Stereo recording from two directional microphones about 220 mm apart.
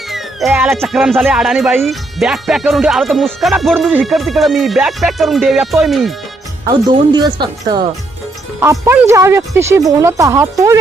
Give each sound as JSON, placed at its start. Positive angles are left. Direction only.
{"t": 0.1, "sound": "speech", "side_deg": 0}
{"t": 6.7, "sound": "speech", "side_deg": -20}